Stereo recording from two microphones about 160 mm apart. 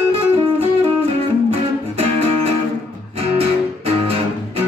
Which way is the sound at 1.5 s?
35° right (ahead or behind).